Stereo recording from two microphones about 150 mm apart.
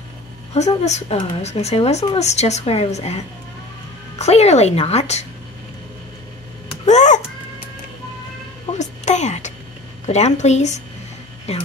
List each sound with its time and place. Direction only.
0.6 s speech: 50° left (ahead or behind)
4.2 s speech: 45° left (ahead or behind)
6.9 s speech: 50° left (ahead or behind)
8.7 s music: 50° left (ahead or behind)
10.0 s speech: 50° left (ahead or behind)